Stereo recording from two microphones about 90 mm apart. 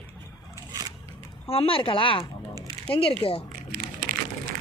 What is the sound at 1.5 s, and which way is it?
Speech, 90° left.